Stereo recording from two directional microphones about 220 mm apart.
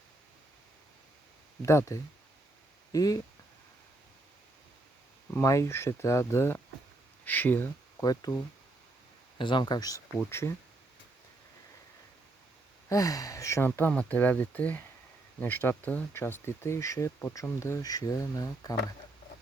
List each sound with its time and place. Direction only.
1.6 s speech: 15° left (ahead or behind)
5.3 s speech: 15° left (ahead or behind)
9.4 s speech: 20° left (ahead or behind)
12.9 s speech: 15° left (ahead or behind)